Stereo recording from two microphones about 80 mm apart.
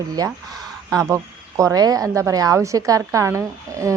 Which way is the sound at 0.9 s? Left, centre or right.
Right.